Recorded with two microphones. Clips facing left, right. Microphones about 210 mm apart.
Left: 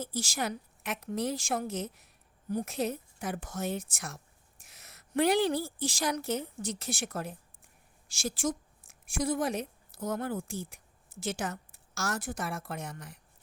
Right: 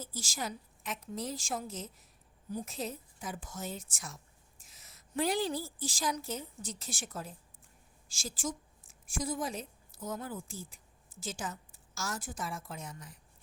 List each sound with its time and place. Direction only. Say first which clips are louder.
0.0 s a woman's voice: left 6 dB; 70° left (ahead or behind)